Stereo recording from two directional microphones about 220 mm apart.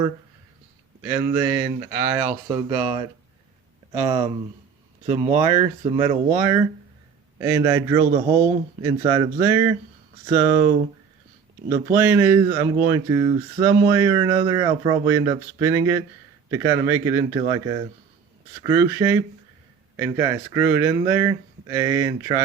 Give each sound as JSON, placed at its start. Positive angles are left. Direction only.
{"t": 1.0, "sound": "speech", "side_deg": -10}
{"t": 3.9, "sound": "speech", "side_deg": -20}
{"t": 11.9, "sound": "speech", "side_deg": -10}